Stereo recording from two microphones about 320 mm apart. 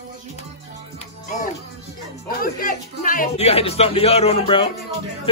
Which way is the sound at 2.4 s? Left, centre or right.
Left.